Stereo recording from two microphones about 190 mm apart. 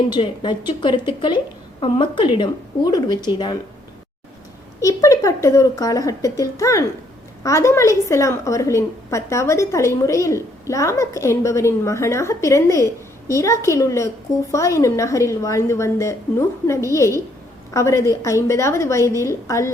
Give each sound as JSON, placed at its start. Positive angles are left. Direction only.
{"t": 0.1, "sound": "speech", "side_deg": 25}
{"t": 4.8, "sound": "a woman's voice", "side_deg": 15}